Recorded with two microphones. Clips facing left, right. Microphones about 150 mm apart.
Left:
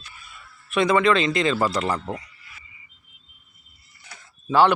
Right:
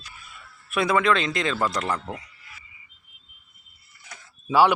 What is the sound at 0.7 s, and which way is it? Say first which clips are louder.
Speech: left 3 dB; 5° right (ahead or behind).